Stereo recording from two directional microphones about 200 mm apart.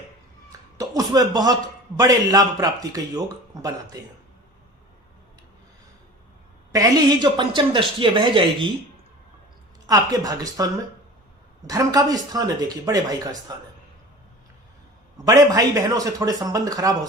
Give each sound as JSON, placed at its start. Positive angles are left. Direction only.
{"t": 0.8, "sound": "a man's voice", "side_deg": -15}
{"t": 6.7, "sound": "speech", "side_deg": -20}
{"t": 9.8, "sound": "a man's voice", "side_deg": -20}
{"t": 15.3, "sound": "a man's voice", "side_deg": -15}